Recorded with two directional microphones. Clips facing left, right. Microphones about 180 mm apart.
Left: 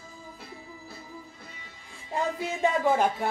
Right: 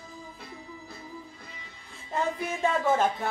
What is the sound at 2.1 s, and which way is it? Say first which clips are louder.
Speech: even; 15° left (ahead or behind).